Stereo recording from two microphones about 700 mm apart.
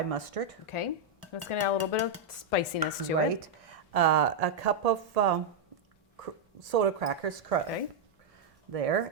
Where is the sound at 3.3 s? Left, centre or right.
Right.